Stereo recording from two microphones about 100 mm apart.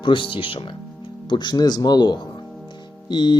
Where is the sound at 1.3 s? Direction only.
50° left (ahead or behind).